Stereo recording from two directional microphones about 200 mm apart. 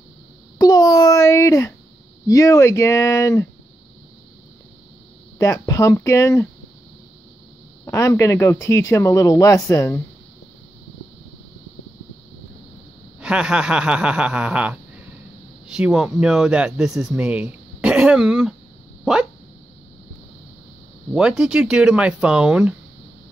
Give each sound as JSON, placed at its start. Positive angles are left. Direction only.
{"t": 0.6, "sound": "babbling", "side_deg": 20}
{"t": 2.2, "sound": "speech", "side_deg": 15}
{"t": 5.4, "sound": "speech", "side_deg": 15}
{"t": 7.8, "sound": "speech", "side_deg": 15}
{"t": 13.2, "sound": "speech", "side_deg": -5}
{"t": 21.1, "sound": "speech", "side_deg": -5}